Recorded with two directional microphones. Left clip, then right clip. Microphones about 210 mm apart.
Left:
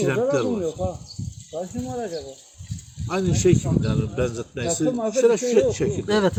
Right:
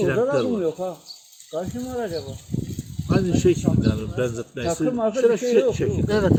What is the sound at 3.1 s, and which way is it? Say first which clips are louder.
Speech: right 1 dB; 15° left (ahead or behind).